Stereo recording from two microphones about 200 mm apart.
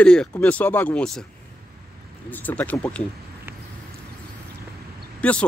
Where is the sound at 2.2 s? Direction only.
10° left (ahead or behind).